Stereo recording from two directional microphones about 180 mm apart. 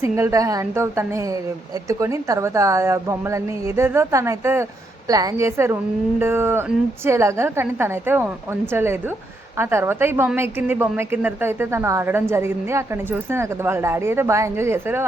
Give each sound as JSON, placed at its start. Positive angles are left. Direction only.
{"t": 0.0, "sound": "speech", "side_deg": -15}